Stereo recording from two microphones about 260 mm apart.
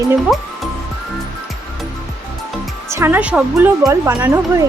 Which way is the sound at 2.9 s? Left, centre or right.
Centre.